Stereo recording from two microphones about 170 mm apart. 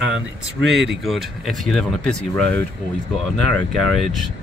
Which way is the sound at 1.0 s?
Centre (ahead or behind).